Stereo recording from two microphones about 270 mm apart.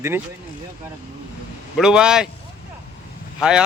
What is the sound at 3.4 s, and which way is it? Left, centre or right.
Speech, centre.